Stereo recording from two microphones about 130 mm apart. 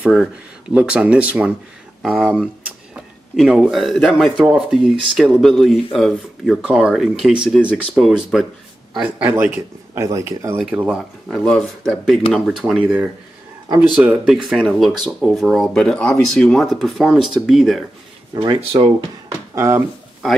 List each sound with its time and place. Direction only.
0.1 s speech: 5° right (ahead or behind)
8.9 s speech: 15° right (ahead or behind)
9.9 s speech: 25° right (ahead or behind)
10.6 s speech: 10° right (ahead or behind)
11.2 s speech: 5° left (ahead or behind); by 14.3 s 15° right (ahead or behind)
14.3 s speech: centre (ahead or behind)
18.3 s speech: 40° right (ahead or behind)
19.5 s speech: 20° right (ahead or behind)